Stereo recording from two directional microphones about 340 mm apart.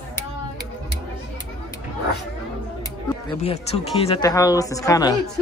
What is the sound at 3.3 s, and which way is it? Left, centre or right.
Speech, centre.